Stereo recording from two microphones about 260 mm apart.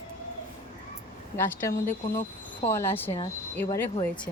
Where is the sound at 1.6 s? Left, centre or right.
Centre.